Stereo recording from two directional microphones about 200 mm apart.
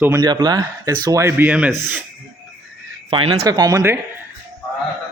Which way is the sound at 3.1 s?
25° right (ahead or behind).